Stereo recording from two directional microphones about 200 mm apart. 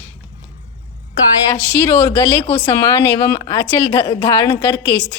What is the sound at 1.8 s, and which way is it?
A woman's voice, 15° left (ahead or behind).